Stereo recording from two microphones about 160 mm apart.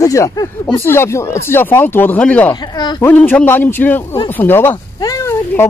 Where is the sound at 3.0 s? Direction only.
10° left (ahead or behind).